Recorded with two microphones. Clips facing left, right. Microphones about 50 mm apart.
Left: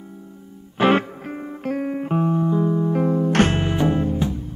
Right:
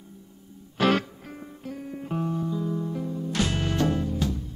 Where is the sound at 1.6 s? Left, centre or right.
Left.